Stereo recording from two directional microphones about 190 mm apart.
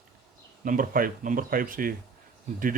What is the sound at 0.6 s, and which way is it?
Speech, 45° right (ahead or behind).